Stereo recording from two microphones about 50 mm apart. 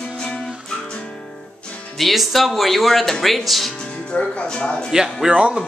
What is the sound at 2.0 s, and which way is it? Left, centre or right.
Speech, centre.